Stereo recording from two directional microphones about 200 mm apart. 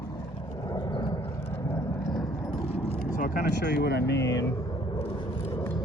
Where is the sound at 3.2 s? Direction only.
50° left (ahead or behind).